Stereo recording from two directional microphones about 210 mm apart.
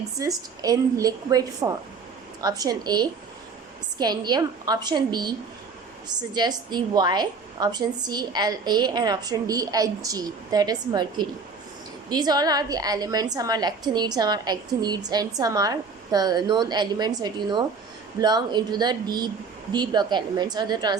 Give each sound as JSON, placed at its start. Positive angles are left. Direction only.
{"t": 0.2, "sound": "a woman's voice", "side_deg": -15}
{"t": 6.3, "sound": "a woman's voice", "side_deg": -20}